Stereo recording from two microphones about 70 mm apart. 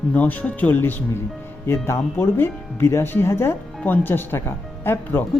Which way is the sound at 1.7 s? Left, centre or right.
Left.